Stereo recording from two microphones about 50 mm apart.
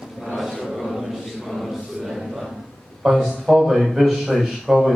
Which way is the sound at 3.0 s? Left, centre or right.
Centre.